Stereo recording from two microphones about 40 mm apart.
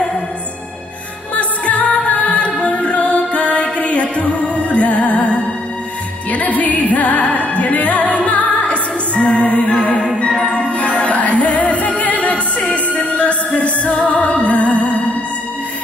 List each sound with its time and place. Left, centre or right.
1.3 s music: left